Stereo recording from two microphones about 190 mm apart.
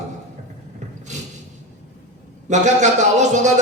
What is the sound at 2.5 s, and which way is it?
Speech, 40° right (ahead or behind).